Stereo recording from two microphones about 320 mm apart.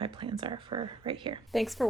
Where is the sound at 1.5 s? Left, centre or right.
Centre.